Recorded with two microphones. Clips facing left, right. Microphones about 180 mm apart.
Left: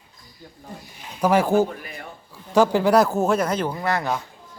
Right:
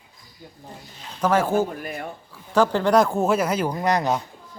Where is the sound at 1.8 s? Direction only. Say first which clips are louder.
Right 6 dB; 50° right (ahead or behind).